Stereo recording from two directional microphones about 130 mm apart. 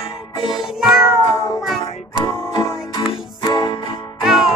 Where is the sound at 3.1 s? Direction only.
35° left (ahead or behind).